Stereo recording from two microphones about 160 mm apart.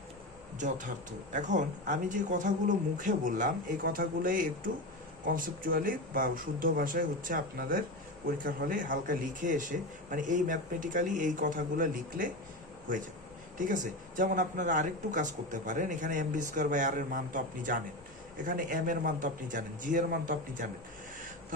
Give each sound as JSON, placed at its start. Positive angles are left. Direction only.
{"t": 1.3, "sound": "speech", "side_deg": -50}